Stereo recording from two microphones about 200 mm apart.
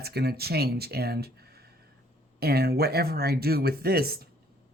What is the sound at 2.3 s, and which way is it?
Speech, 50° right (ahead or behind).